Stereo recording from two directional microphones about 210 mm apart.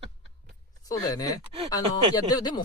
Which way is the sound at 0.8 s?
15° left (ahead or behind).